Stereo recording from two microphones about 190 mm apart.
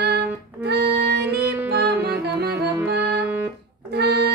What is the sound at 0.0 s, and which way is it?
Music, 60° right (ahead or behind).